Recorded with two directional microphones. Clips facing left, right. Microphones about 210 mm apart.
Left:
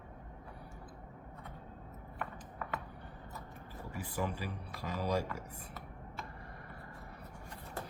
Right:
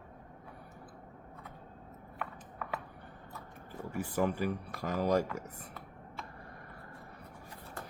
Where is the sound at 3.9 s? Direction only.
50° right (ahead or behind).